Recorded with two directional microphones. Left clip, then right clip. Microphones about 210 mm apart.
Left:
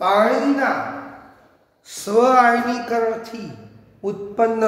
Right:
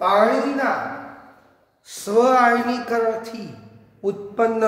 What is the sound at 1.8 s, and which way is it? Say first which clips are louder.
A man's voice: left 1 dB; 5° left (ahead or behind).